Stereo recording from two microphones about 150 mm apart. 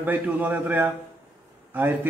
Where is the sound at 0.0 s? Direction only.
10° right (ahead or behind).